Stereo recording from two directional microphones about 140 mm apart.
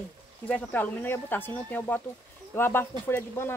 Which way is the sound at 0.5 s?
10° left (ahead or behind).